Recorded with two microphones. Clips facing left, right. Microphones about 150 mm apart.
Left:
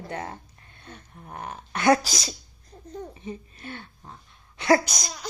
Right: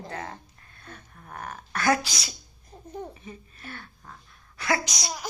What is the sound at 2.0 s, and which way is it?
Speech, 40° left (ahead or behind).